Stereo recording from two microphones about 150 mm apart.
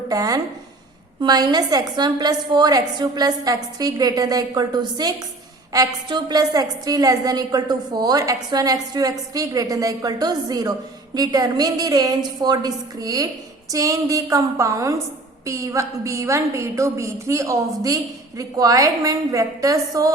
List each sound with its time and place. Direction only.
0.1 s a woman's voice: 25° right (ahead or behind)